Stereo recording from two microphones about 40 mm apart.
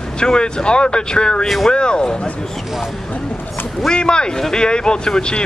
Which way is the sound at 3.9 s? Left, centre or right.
Left.